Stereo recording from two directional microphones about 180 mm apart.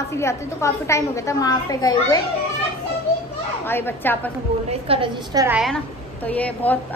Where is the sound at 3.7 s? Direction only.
10° left (ahead or behind).